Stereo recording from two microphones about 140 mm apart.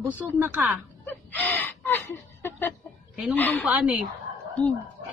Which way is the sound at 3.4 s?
10° left (ahead or behind).